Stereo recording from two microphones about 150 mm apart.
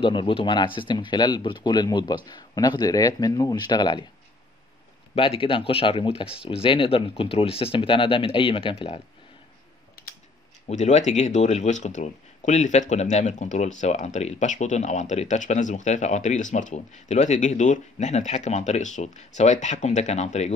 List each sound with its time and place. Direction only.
0.0 s speech: 35° left (ahead or behind)
5.1 s speech: 40° left (ahead or behind)
10.0 s typing: 90° left
10.7 s speech: 50° left (ahead or behind)